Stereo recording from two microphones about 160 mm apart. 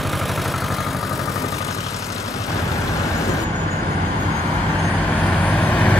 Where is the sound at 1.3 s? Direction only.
20° left (ahead or behind).